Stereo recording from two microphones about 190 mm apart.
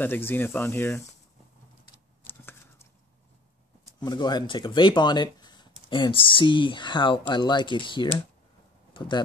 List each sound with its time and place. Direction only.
0.0 s speech: 10° left (ahead or behind)
2.2 s a sound: 10° left (ahead or behind)
4.0 s speech: 20° left (ahead or behind)